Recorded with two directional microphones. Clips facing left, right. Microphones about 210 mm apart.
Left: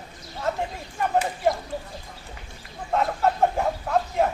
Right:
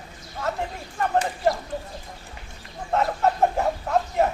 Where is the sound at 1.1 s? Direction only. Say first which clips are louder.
Even; 5° left (ahead or behind).